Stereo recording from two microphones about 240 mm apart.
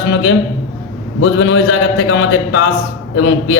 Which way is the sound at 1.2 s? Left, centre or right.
Left.